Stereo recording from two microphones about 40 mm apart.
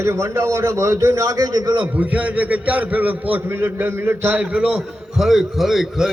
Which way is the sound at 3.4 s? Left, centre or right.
Right.